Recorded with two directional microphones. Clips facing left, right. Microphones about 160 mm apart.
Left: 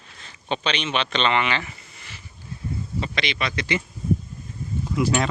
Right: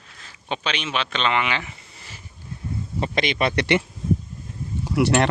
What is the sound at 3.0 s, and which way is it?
Speech, 50° right (ahead or behind).